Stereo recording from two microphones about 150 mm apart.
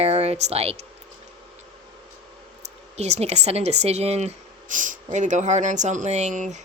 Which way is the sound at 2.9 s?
45° right (ahead or behind).